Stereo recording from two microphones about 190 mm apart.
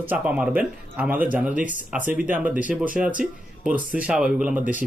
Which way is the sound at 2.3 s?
10° right (ahead or behind).